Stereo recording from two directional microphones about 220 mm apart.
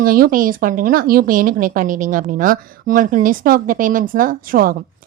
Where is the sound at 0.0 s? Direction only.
40° right (ahead or behind).